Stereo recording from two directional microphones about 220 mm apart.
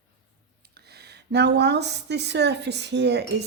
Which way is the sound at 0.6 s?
45° right (ahead or behind).